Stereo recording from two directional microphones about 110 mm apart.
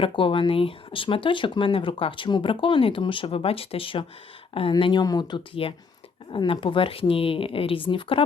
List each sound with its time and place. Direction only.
0.0 s speech: 50° left (ahead or behind)
4.8 s speech: 40° left (ahead or behind)
5.6 s speech: 55° left (ahead or behind)